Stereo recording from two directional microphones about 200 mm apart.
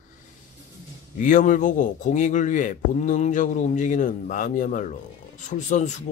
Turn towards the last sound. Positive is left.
turn(degrees=35)  # may be behind; listen again after turning